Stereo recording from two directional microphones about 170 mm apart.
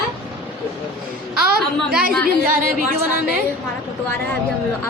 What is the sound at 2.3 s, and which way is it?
Speech, 55° right (ahead or behind).